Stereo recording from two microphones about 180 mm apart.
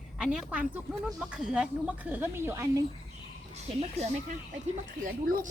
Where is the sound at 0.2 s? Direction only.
5° right (ahead or behind).